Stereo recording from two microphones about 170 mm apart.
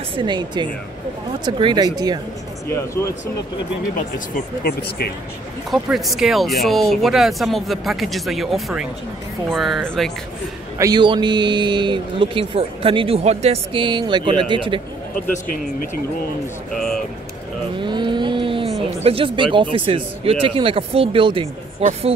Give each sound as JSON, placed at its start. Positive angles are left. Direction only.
{"t": 0.1, "sound": "a man's voice", "side_deg": -25}
{"t": 2.7, "sound": "speech", "side_deg": 15}
{"t": 4.6, "sound": "speech", "side_deg": 65}
{"t": 5.7, "sound": "speech", "side_deg": 0}
{"t": 10.8, "sound": "a man's voice", "side_deg": -25}
{"t": 15.3, "sound": "speech", "side_deg": 50}
{"t": 16.7, "sound": "speech", "side_deg": 5}
{"t": 17.8, "sound": "vehicle", "side_deg": -25}
{"t": 19.0, "sound": "speech", "side_deg": -30}